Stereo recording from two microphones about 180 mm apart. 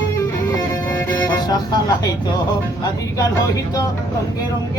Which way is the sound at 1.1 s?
25° left (ahead or behind).